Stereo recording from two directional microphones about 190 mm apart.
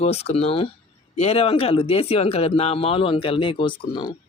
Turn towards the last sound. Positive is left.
turn(degrees=20)  # may be behind; listen again after turning